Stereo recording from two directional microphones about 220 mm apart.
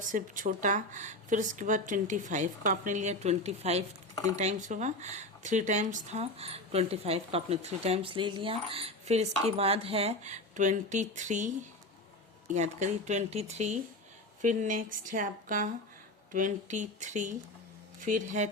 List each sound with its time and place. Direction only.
0.0 s a woman's voice: 35° right (ahead or behind)
12.5 s a woman's voice: 30° right (ahead or behind)